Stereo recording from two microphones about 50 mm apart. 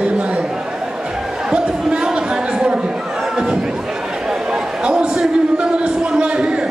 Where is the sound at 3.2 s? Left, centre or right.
Centre.